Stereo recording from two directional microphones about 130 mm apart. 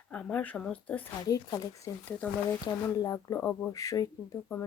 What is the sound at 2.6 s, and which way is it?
Speech, 25° left (ahead or behind).